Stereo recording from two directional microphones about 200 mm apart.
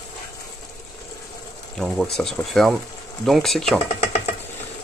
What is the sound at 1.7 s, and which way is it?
Speech, centre (ahead or behind).